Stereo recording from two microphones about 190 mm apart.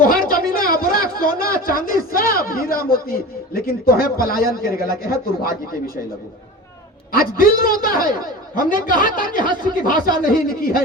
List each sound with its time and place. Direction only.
0.0 s a sound: 50° left (ahead or behind)
1.1 s a man's voice: 50° left (ahead or behind)
7.1 s a man's voice: 50° left (ahead or behind)